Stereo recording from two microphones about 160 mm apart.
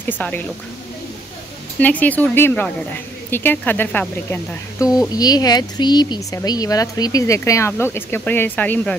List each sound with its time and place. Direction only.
0.0 s a woman's voice: 10° left (ahead or behind)
1.8 s a woman's voice: 10° left (ahead or behind)
5.1 s speech: 25° left (ahead or behind)